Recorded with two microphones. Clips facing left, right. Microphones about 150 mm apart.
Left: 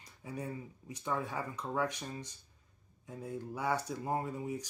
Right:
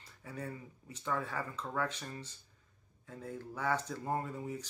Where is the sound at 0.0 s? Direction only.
15° left (ahead or behind).